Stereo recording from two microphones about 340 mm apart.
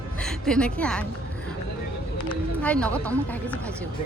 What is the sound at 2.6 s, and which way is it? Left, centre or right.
Speech, centre.